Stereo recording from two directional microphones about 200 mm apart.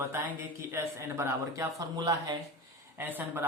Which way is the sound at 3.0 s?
10° right (ahead or behind).